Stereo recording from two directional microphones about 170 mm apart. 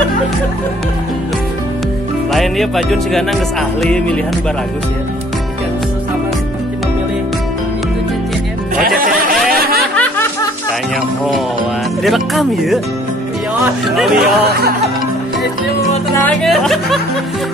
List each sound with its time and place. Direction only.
2.3 s speech: centre (ahead or behind)
8.7 s music: 55° right (ahead or behind)
9.9 s snicker: 10° left (ahead or behind)
12.0 s speech: centre (ahead or behind)
14.1 s speech: 70° right (ahead or behind)
16.4 s speech: centre (ahead or behind)